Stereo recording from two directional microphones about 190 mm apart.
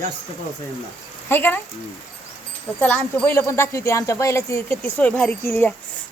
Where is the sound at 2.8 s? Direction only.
10° left (ahead or behind).